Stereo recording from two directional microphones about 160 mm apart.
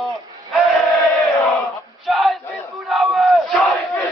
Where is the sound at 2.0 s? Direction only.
Centre (ahead or behind).